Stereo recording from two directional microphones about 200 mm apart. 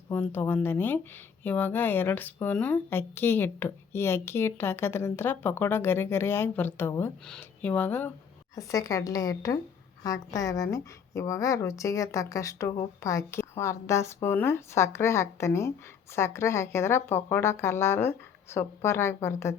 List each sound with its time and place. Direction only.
0.1 s a woman's voice: 10° left (ahead or behind)